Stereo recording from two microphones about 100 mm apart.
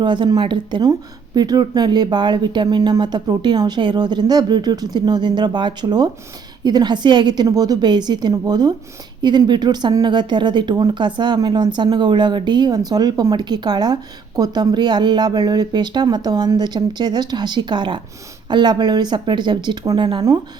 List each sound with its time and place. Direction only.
0.0 s speech: 50° right (ahead or behind)